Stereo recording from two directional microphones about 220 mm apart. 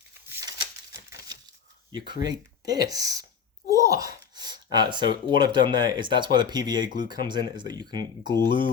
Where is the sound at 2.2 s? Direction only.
15° right (ahead or behind).